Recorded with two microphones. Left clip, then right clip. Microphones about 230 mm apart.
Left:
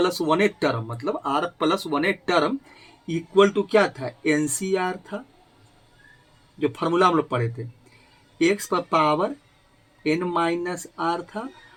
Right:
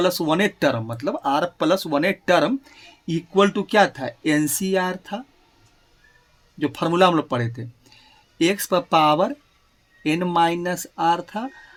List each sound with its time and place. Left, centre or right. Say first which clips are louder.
0.0 s speech: right 1 dB; right
6.6 s speech: right 2 dB; right